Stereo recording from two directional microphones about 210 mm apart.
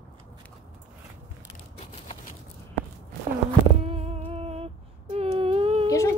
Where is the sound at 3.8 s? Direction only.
30° right (ahead or behind).